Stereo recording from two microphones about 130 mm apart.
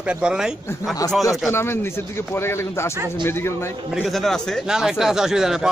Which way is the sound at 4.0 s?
Centre (ahead or behind).